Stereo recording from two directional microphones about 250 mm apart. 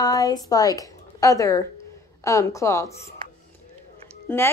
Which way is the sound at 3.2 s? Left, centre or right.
Centre.